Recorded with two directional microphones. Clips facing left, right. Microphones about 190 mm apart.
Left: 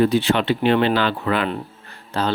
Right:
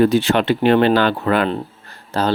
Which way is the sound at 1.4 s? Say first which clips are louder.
Right 4 dB; 40° right (ahead or behind).